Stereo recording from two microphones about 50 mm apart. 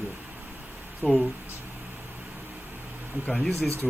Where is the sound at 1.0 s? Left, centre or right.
Left.